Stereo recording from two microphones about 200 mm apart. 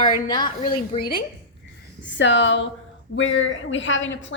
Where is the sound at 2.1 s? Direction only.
65° left (ahead or behind).